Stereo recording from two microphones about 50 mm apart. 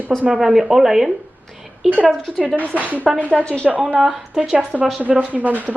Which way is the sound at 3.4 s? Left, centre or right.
Centre.